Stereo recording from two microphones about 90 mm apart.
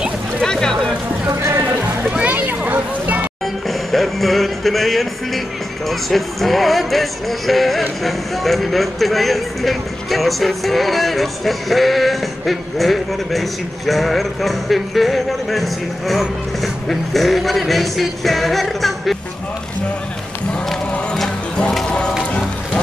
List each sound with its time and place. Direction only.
0.4 s a sound: 5° left (ahead or behind)
1.3 s music: 30° right (ahead or behind)
2.0 s a sound: 15° right (ahead or behind)
3.6 s music: centre (ahead or behind)
5.9 s speech: centre (ahead or behind)
20.9 s music: 10° left (ahead or behind)